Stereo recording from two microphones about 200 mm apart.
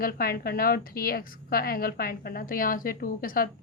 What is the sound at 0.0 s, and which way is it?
A woman's voice, 45° left (ahead or behind).